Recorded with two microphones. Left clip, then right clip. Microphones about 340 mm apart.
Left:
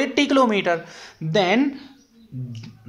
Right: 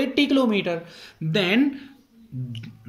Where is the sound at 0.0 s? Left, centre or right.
Centre.